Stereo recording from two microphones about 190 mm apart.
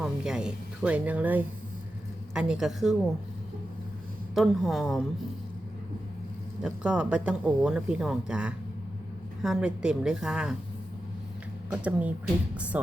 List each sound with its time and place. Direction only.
0.0 s speech: 5° right (ahead or behind)
4.4 s speech: centre (ahead or behind)
6.6 s speech: 5° right (ahead or behind)
11.7 s speech: 10° right (ahead or behind)